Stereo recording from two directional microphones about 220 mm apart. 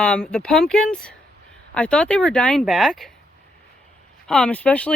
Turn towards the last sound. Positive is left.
turn(degrees=5)  # may be behind; listen again after turning